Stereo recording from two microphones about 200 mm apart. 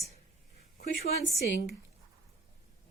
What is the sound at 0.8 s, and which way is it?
Speech, 55° left (ahead or behind).